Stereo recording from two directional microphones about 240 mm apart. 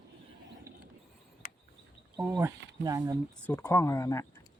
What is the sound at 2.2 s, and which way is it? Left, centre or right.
Speech, centre.